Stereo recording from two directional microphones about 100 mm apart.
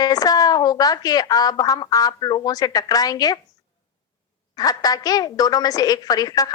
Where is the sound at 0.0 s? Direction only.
40° left (ahead or behind).